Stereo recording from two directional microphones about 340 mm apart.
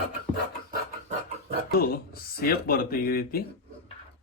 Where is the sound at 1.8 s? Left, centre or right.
Left.